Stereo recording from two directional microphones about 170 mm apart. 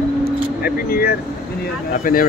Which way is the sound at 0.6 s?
60° left (ahead or behind).